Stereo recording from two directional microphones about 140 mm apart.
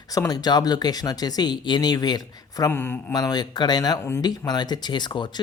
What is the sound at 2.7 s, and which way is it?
Speech, 15° left (ahead or behind).